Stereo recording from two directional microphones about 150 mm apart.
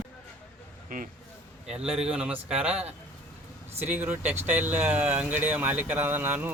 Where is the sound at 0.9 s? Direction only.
70° right (ahead or behind).